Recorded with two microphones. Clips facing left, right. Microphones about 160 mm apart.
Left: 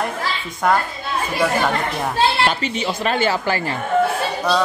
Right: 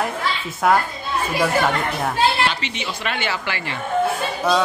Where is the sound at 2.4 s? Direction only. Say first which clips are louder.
Left 4 dB; 40° left (ahead or behind).